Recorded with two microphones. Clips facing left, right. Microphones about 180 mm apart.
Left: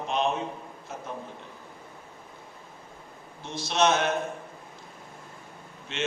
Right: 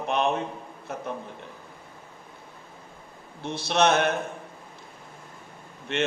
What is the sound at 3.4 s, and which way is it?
Speech, 60° right (ahead or behind).